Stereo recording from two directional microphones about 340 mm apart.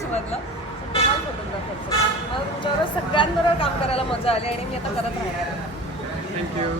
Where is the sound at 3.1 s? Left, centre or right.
Centre.